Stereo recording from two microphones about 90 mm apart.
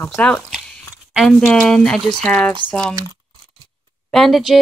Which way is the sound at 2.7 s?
10° left (ahead or behind).